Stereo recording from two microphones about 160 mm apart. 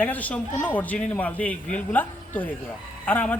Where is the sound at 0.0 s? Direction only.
10° left (ahead or behind).